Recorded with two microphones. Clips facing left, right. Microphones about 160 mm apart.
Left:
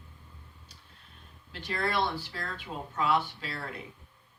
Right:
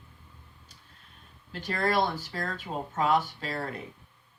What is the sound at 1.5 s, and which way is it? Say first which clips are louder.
Speech: right 4 dB; 45° right (ahead or behind).